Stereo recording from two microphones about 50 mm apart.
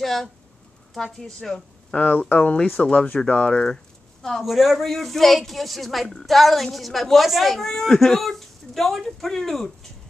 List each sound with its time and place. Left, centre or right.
0.0 s a woman's voice: centre
2.0 s a woman's voice: left; by 9.7 s centre